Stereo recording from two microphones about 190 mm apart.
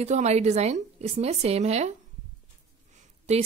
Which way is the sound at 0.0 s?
35° right (ahead or behind).